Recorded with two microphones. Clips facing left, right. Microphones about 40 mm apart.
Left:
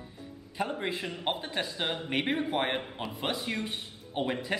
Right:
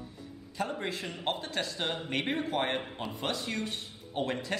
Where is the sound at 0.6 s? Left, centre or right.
Centre.